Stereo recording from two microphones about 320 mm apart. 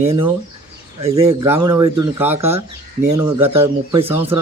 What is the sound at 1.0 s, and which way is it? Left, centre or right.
Speech, centre.